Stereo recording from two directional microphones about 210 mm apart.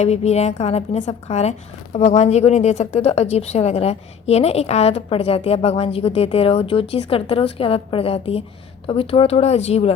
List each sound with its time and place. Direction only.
0.0 s a woman's voice: 30° left (ahead or behind)